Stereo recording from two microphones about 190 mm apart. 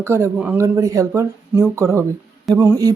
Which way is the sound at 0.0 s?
15° right (ahead or behind).